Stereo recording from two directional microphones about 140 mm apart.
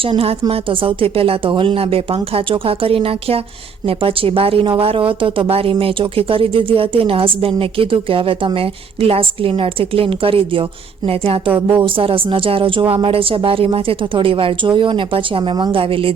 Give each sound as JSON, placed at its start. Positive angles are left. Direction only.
{"t": 0.0, "sound": "speech", "side_deg": -40}